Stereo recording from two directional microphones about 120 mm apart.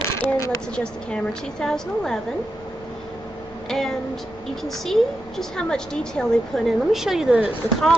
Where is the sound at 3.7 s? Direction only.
Centre (ahead or behind).